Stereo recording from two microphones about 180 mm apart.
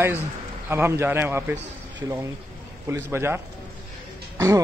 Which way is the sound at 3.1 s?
15° right (ahead or behind).